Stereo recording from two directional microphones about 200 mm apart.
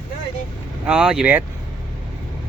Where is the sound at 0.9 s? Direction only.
5° right (ahead or behind).